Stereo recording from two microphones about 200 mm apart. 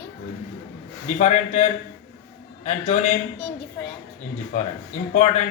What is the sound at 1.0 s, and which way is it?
Speech, 35° left (ahead or behind).